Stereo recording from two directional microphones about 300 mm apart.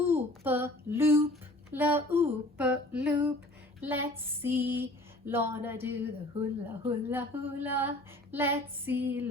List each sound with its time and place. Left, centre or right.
0.0 s a sound: centre
4.2 s female singing: centre
6.3 s speech: right
7.1 s female singing: centre